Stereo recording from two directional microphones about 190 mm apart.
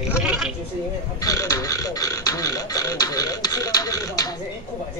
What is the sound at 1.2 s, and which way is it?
Speech, 20° left (ahead or behind).